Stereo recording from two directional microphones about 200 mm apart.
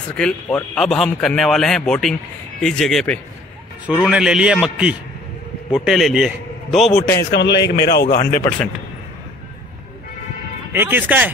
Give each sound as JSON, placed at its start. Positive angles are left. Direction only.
{"t": 0.1, "sound": "a man's voice", "side_deg": 5}
{"t": 7.2, "sound": "speech", "side_deg": 55}
{"t": 8.3, "sound": "speech", "side_deg": 10}
{"t": 10.7, "sound": "speech", "side_deg": -10}